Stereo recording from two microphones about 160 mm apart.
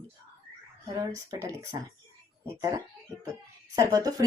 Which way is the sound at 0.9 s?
20° right (ahead or behind).